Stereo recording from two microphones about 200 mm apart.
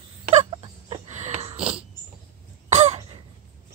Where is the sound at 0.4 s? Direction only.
30° right (ahead or behind).